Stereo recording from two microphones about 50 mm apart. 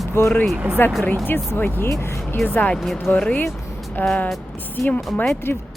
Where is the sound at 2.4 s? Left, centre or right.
Centre.